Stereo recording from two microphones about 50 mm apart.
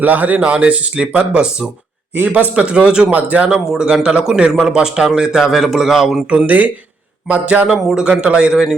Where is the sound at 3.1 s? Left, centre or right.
Right.